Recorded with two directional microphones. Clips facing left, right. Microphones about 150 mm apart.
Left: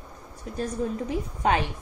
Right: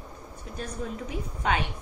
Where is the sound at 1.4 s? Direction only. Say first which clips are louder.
Left 3 dB; 40° left (ahead or behind).